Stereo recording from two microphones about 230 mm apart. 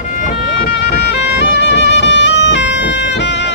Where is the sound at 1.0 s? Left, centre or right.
Left.